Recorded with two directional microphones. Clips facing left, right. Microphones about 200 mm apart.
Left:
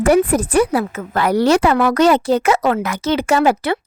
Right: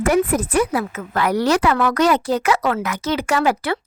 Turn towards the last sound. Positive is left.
turn(degrees=25)  # may be behind; listen again after turning